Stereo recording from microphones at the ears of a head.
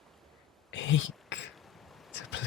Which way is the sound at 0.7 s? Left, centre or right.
Left.